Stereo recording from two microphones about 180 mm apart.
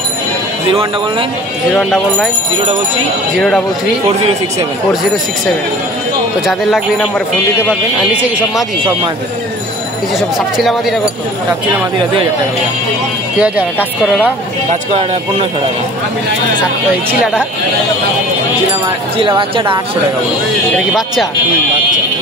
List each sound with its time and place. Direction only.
1.8 s speech: centre (ahead or behind)
3.3 s speech: 5° left (ahead or behind)
6.4 s speech: centre (ahead or behind)
8.1 s speech: 5° right (ahead or behind)
10.6 s speech: centre (ahead or behind)
13.4 s speech: 5° right (ahead or behind)
19.1 s speech: 30° right (ahead or behind)
20.7 s speech: centre (ahead or behind)